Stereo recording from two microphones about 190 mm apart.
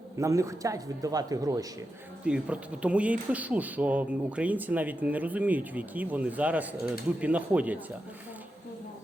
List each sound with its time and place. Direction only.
0.2 s speech: 15° right (ahead or behind)
2.2 s speech: 5° right (ahead or behind)